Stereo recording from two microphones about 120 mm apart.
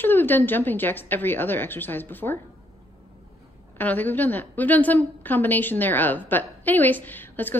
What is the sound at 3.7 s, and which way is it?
A woman's voice, 15° left (ahead or behind).